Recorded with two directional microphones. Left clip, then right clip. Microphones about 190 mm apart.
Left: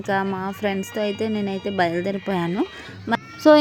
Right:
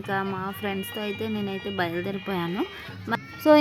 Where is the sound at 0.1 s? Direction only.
20° left (ahead or behind).